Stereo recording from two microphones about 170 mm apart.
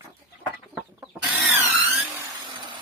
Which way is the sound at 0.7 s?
5° right (ahead or behind).